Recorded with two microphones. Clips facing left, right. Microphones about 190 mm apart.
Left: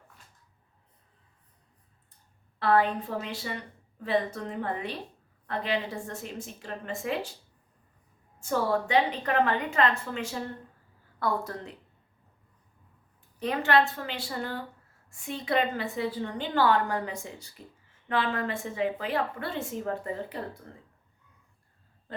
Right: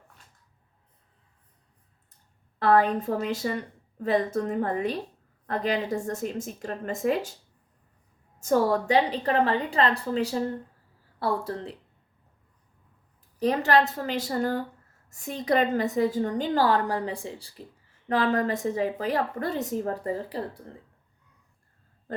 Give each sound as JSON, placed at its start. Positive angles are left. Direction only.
{"t": 2.6, "sound": "a woman's voice", "side_deg": -45}
{"t": 8.4, "sound": "a woman's voice", "side_deg": -40}
{"t": 13.4, "sound": "a woman's voice", "side_deg": -40}